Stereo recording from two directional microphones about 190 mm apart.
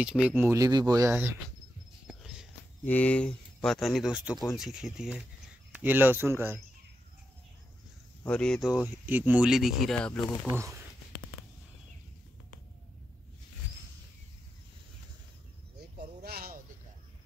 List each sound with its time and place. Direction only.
0.0 s speech: 5° right (ahead or behind)
2.0 s a sound: centre (ahead or behind)
2.8 s speech: 10° left (ahead or behind); by 6.6 s 10° right (ahead or behind)
8.2 s speech: 5° left (ahead or behind)
10.4 s speech: 15° right (ahead or behind)
16.2 s a sound: 55° right (ahead or behind)